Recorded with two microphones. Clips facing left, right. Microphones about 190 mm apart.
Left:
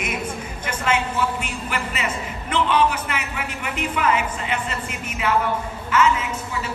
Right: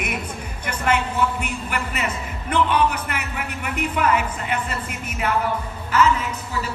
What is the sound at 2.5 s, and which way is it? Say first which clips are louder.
A man's voice: even; 55° right (ahead or behind).